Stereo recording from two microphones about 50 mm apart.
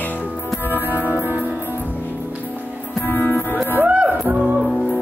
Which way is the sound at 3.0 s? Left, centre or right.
Left.